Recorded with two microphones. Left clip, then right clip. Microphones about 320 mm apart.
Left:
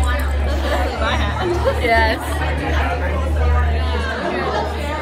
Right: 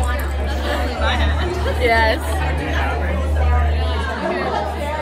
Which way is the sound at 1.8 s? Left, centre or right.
Centre.